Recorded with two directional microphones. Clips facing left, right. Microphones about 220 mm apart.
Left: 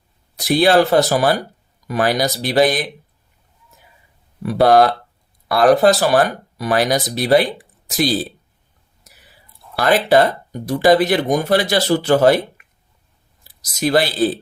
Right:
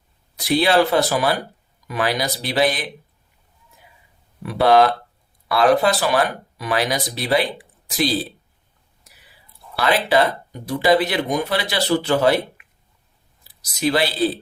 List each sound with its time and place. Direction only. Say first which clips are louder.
0.3 s speech: left 3 dB; 45° left (ahead or behind)
4.4 s speech: left 3 dB; 40° left (ahead or behind)
9.7 s speech: left 4 dB; 45° left (ahead or behind)
13.7 s speech: left 3 dB; 45° left (ahead or behind)